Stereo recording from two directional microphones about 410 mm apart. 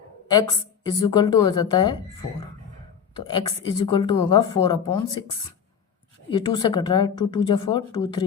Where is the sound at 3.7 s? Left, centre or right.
Centre.